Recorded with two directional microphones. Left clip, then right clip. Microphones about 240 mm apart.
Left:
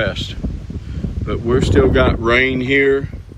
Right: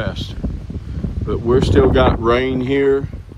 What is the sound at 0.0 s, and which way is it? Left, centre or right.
Speech, centre.